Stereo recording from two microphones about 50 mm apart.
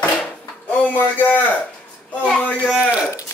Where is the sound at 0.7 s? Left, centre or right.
Left.